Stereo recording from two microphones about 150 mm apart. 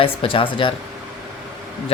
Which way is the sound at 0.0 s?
40° left (ahead or behind).